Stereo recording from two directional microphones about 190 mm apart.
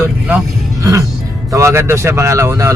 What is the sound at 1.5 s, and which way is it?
Speech, 15° right (ahead or behind).